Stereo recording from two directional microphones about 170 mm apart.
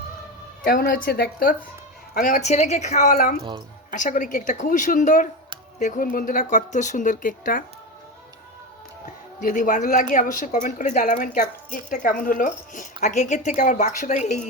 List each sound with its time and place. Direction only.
0.6 s speech: 60° left (ahead or behind)
2.1 s a woman's voice: 50° left (ahead or behind)
9.0 s a woman's voice: 50° left (ahead or behind)